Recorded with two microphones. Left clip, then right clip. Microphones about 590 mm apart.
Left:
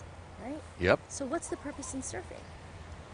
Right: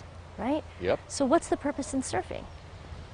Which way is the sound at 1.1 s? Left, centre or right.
Right.